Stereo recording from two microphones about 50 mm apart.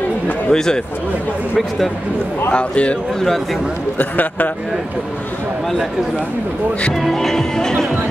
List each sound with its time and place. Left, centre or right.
0.5 s speech: centre
2.5 s speech: left
4.0 s a man's voice: left
7.0 s speech: centre